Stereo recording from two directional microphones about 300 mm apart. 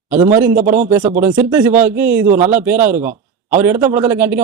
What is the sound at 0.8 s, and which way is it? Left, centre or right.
Speech, right.